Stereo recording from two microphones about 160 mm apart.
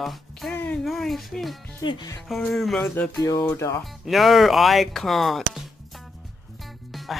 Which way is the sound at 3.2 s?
25° left (ahead or behind).